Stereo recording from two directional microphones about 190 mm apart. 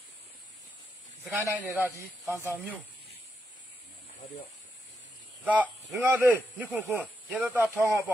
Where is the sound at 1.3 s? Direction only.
10° right (ahead or behind).